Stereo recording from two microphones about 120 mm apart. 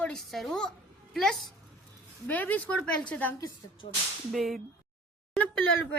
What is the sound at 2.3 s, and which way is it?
Speech, 15° left (ahead or behind).